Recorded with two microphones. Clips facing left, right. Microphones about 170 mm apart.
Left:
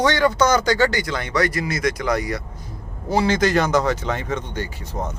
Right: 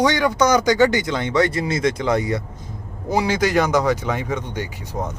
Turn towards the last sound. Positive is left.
turn(degrees=-10)  # may be behind; listen again after turning